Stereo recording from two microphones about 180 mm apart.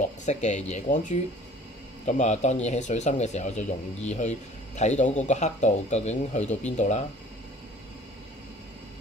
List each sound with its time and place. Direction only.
0.2 s speech: 40° left (ahead or behind)